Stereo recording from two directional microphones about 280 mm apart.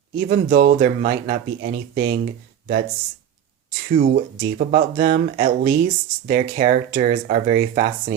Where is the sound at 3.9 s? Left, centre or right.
Right.